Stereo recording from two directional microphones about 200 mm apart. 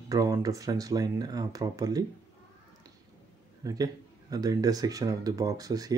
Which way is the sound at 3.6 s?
20° right (ahead or behind).